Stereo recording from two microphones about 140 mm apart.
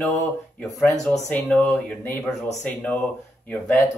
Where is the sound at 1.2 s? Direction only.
10° left (ahead or behind).